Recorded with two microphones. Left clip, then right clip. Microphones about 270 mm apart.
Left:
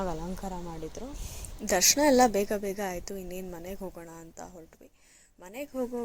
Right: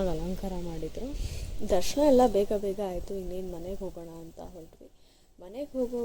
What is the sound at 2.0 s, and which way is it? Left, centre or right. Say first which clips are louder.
A woman's voice: right 4 dB; left.